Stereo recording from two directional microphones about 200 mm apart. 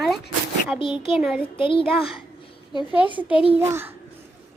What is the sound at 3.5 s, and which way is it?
Speech, 10° right (ahead or behind).